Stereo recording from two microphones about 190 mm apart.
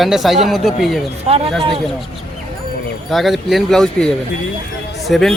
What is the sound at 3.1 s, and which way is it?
Speech, centre (ahead or behind).